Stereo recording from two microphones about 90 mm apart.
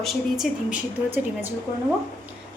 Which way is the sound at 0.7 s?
20° right (ahead or behind).